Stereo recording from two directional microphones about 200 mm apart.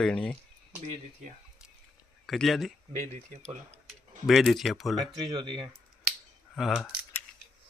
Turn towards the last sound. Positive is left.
turn(degrees=0)  # may be behind; listen again after turning